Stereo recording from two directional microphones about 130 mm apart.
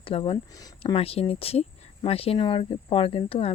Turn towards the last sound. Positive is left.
turn(degrees=45)  # may be behind; listen again after turning